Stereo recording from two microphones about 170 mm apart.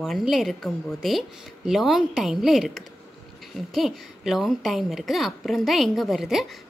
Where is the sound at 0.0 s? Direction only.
Centre (ahead or behind).